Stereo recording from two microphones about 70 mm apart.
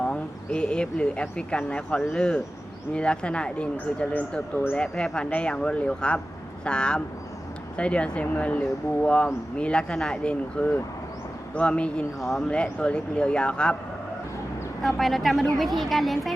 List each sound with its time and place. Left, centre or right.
0.0 s speech: centre
4.8 s speech: centre
14.8 s speech: centre